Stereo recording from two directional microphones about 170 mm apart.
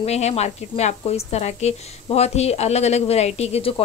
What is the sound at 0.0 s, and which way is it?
Speech, 40° left (ahead or behind).